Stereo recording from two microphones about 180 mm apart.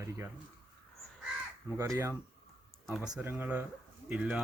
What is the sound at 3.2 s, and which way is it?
Speech, 10° right (ahead or behind).